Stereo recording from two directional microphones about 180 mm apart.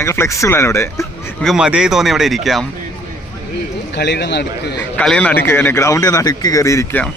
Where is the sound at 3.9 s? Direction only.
70° left (ahead or behind).